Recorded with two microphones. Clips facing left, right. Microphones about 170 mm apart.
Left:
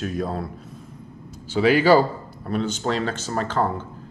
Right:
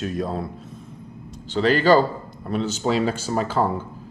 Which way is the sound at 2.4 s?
Centre (ahead or behind).